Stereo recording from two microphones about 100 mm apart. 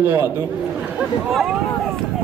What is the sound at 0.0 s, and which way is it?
Speech, 25° right (ahead or behind).